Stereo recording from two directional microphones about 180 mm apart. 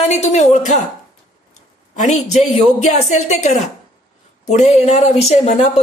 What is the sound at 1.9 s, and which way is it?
Speech, 40° left (ahead or behind).